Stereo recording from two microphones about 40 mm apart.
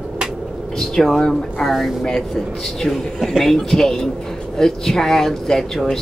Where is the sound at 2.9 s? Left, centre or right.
Centre.